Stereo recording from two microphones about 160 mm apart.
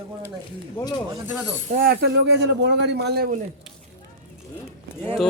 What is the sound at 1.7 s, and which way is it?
Speech, 70° right (ahead or behind).